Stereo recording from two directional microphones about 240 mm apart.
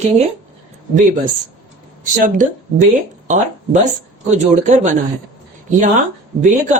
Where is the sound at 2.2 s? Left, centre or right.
Right.